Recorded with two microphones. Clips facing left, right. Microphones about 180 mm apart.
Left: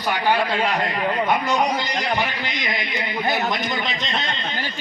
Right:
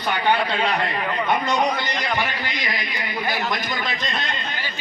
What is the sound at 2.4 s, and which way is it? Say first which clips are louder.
A man's voice: left 1 dB; 20° left (ahead or behind).